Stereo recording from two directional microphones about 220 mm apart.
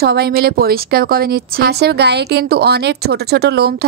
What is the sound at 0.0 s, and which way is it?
Speech, 45° right (ahead or behind).